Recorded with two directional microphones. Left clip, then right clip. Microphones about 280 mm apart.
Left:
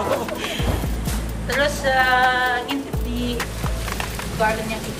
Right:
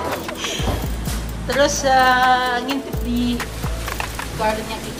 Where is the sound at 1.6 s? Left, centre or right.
Centre.